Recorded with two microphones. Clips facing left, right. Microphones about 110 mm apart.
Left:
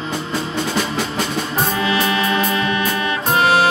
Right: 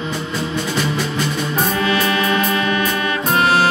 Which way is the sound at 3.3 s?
10° left (ahead or behind).